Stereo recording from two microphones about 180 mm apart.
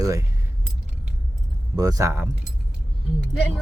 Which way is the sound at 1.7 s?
20° right (ahead or behind).